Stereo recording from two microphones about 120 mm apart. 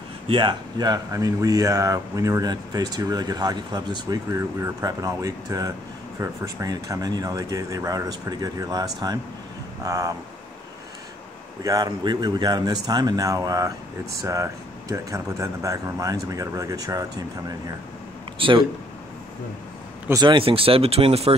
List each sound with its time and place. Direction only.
0.3 s speech: 40° right (ahead or behind)
11.6 s speech: 35° right (ahead or behind)
18.4 s speech: 45° right (ahead or behind)
20.2 s speech: 45° right (ahead or behind)